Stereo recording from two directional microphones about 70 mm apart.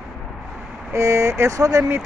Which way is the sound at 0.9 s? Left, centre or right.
Right.